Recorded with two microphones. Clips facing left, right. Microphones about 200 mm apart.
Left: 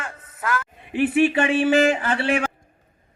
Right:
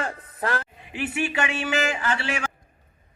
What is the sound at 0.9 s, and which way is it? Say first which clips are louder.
Speech: left 9 dB; 55° left (ahead or behind).